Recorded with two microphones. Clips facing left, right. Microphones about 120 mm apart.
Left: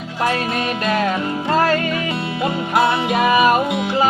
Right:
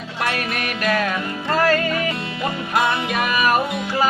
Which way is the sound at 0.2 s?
25° left (ahead or behind).